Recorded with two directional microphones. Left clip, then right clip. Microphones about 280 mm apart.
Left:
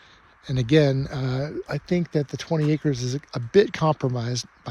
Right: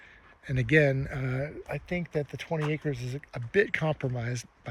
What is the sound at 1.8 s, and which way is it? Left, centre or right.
Speech, left.